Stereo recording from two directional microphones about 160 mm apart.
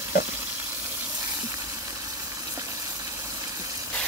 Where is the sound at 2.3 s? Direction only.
20° right (ahead or behind).